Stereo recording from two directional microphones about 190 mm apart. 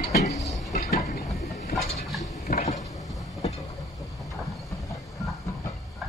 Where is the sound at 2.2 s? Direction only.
40° left (ahead or behind).